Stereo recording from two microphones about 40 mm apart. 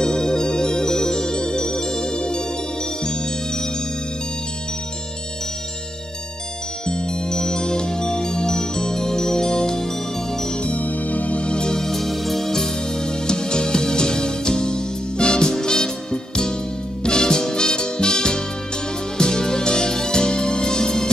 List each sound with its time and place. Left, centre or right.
0.0 s music: centre
6.9 s music: left
10.6 s music: left; by 21.1 s centre